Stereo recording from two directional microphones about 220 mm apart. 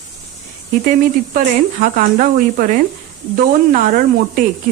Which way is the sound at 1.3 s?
35° right (ahead or behind).